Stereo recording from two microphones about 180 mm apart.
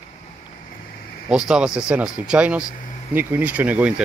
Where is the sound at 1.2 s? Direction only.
5° right (ahead or behind).